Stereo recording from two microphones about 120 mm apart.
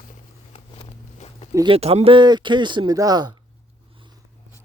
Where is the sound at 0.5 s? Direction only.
50° left (ahead or behind).